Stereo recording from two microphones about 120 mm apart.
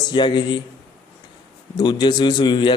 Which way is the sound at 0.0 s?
40° left (ahead or behind).